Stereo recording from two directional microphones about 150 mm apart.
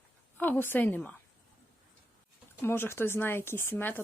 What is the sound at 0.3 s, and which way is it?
Speech, 10° left (ahead or behind).